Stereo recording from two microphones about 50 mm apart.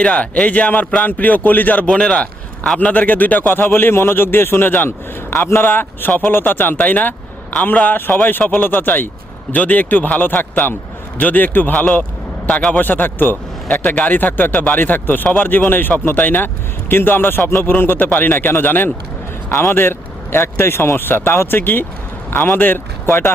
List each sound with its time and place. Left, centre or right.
0.0 s speech: left
1.9 s speech: centre
2.7 s a man's voice: left
19.5 s a man's voice: left